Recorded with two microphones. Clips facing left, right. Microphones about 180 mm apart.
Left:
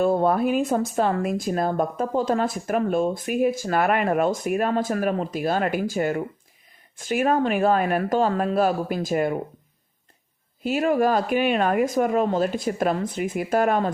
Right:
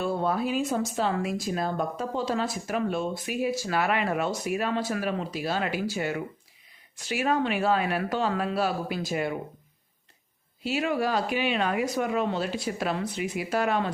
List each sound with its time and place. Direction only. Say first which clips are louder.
0.0 s speech: left 7 dB; 50° left (ahead or behind)
10.6 s speech: left 6 dB; 50° left (ahead or behind)